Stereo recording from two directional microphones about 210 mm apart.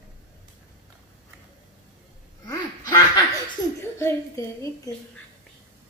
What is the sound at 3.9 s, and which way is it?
Speech, 15° left (ahead or behind).